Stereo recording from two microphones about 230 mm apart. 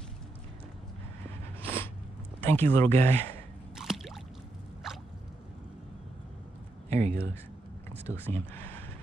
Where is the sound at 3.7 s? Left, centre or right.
Centre.